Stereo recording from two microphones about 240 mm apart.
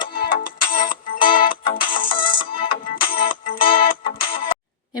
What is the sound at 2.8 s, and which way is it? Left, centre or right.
Music, left.